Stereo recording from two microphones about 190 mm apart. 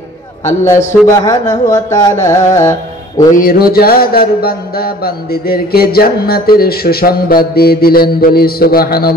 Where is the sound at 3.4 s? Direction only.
50° left (ahead or behind).